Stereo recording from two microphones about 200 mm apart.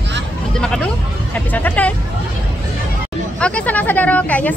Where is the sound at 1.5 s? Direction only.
10° left (ahead or behind).